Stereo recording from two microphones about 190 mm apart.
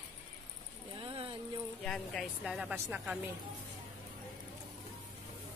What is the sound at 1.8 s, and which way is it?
Speech, 5° left (ahead or behind).